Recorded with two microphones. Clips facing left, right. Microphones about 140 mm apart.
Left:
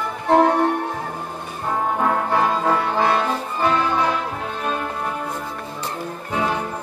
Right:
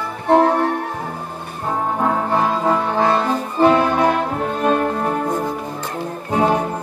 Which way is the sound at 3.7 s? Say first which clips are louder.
Right 5 dB; 55° right (ahead or behind).